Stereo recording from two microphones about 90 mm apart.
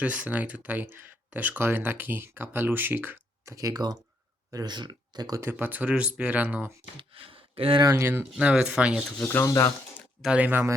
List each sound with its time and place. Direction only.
0.0 s speech: 15° right (ahead or behind)
3.5 s speech: 40° right (ahead or behind)
5.4 s speech: 25° right (ahead or behind)
7.1 s a sound: 90° right
7.9 s speech: 25° right (ahead or behind)
8.4 s speech: 10° right (ahead or behind)
9.4 s speech: 40° left (ahead or behind)
10.2 s speech: 15° right (ahead or behind)